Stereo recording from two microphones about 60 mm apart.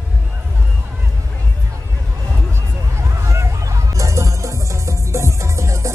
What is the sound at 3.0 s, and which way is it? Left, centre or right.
Music, right.